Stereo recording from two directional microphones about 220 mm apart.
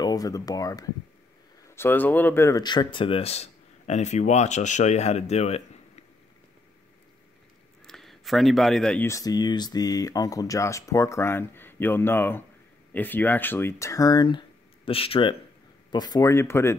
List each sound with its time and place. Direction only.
0.0 s speech: 15° left (ahead or behind)
7.8 s speech: centre (ahead or behind)